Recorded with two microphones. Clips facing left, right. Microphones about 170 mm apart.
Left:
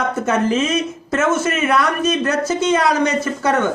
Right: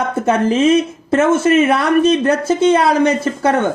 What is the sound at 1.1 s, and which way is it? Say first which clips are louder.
Speech: right 7 dB; 30° right (ahead or behind).